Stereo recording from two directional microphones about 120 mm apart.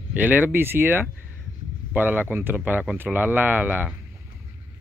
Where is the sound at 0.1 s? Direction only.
15° right (ahead or behind).